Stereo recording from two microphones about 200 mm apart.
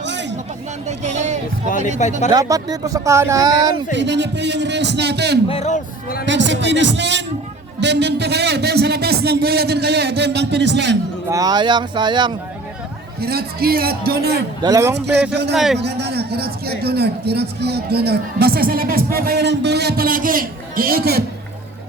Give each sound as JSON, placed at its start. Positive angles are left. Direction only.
{"t": 0.0, "sound": "chatter", "side_deg": -60}
{"t": 0.9, "sound": "speech", "side_deg": -35}
{"t": 2.3, "sound": "speech", "side_deg": -20}
{"t": 3.9, "sound": "a man's voice", "side_deg": -60}
{"t": 5.5, "sound": "a man's voice", "side_deg": 35}
{"t": 6.2, "sound": "a man's voice", "side_deg": -65}
{"t": 11.3, "sound": "speech", "side_deg": -20}
{"t": 13.1, "sound": "a man's voice", "side_deg": -50}
{"t": 14.6, "sound": "speech", "side_deg": -15}
{"t": 14.9, "sound": "a man's voice", "side_deg": -55}
{"t": 15.5, "sound": "a man's voice", "side_deg": 0}
{"t": 15.8, "sound": "a man's voice", "side_deg": -55}